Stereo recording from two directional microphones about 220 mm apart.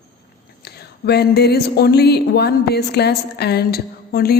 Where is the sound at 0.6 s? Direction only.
45° left (ahead or behind).